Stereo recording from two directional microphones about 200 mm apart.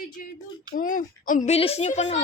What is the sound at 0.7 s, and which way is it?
Speech, 40° left (ahead or behind).